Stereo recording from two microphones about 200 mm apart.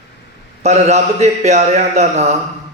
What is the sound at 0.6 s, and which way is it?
A man's voice, 35° right (ahead or behind).